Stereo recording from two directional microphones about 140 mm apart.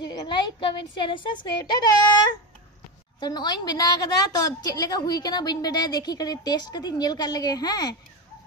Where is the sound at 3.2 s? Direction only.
30° left (ahead or behind).